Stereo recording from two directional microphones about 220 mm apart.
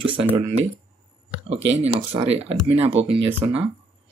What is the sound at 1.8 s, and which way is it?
Speech, 25° right (ahead or behind).